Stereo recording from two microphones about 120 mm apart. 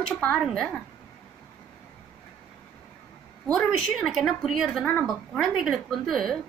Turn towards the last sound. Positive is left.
turn(degrees=0)  # may be behind; listen again after turning